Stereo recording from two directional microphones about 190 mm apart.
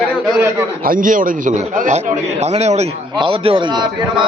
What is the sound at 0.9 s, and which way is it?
A man's voice, 45° right (ahead or behind).